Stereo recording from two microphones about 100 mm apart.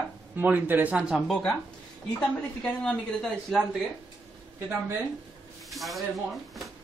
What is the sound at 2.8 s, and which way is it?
Speech, 5° left (ahead or behind).